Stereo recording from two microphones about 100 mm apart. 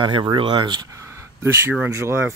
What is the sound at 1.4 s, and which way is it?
Speech, 25° right (ahead or behind).